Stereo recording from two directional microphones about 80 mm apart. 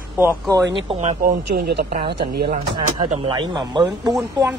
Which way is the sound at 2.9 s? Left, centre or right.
Right.